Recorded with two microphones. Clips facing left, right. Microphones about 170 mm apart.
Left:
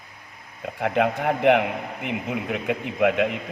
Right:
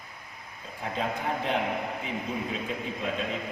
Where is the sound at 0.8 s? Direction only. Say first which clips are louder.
Left 9 dB; 70° left (ahead or behind).